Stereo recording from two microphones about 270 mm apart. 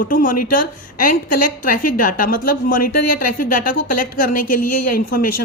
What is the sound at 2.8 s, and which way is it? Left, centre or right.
Speech, left.